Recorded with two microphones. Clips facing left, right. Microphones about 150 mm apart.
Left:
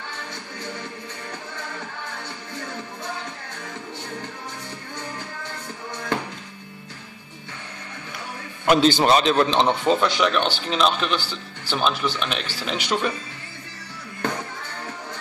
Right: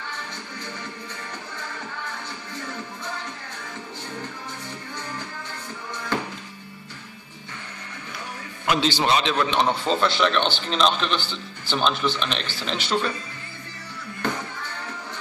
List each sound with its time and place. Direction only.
8.6 s a man's voice: 45° left (ahead or behind)
9.8 s a man's voice: 10° left (ahead or behind)